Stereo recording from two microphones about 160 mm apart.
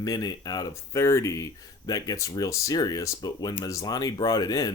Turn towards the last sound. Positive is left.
turn(degrees=25)  # may be behind; listen again after turning